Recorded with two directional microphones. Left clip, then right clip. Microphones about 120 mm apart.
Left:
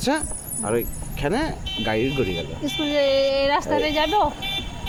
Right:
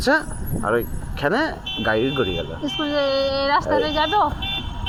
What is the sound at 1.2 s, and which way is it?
Speech, 5° left (ahead or behind).